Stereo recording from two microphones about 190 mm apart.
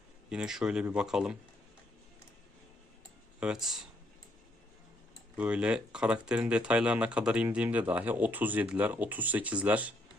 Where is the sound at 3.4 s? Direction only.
5° right (ahead or behind).